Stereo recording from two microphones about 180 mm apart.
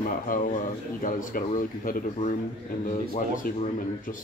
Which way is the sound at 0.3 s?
50° left (ahead or behind).